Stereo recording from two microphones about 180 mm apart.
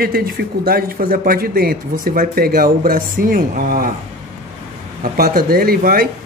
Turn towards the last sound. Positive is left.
turn(degrees=-55)  # may be behind; listen again after turning